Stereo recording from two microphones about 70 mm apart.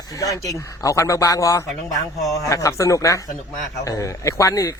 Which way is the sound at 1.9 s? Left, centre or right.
Centre.